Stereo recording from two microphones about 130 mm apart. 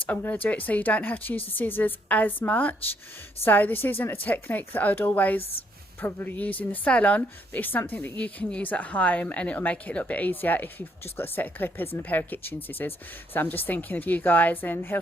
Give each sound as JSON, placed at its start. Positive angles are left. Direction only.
{"t": 0.0, "sound": "speech", "side_deg": 15}
{"t": 5.4, "sound": "speech", "side_deg": 50}
{"t": 6.0, "sound": "speech", "side_deg": 15}